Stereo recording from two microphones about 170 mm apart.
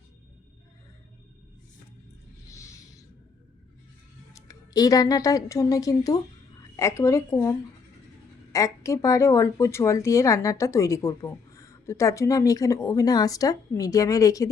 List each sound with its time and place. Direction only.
4.4 s a woman's voice: 20° left (ahead or behind)
8.5 s speech: 20° left (ahead or behind)